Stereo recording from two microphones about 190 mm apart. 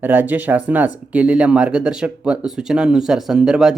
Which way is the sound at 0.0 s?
10° right (ahead or behind).